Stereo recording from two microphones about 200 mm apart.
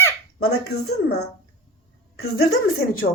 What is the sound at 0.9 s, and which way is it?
Speech, 55° left (ahead or behind).